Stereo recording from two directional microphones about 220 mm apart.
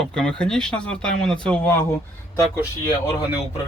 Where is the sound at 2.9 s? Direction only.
15° left (ahead or behind).